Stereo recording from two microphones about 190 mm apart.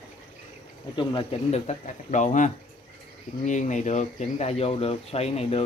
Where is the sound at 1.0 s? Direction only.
30° left (ahead or behind).